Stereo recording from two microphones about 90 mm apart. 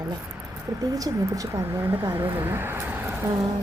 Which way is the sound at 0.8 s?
40° right (ahead or behind).